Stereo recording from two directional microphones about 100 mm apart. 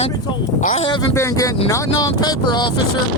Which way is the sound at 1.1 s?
30° left (ahead or behind).